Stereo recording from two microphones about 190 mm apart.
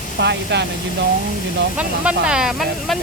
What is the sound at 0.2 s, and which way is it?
Speech, 65° right (ahead or behind).